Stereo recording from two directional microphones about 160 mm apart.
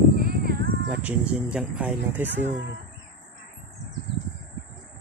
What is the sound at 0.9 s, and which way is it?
Speech, 10° right (ahead or behind).